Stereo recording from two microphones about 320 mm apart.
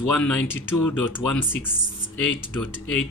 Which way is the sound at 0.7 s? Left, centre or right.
Left.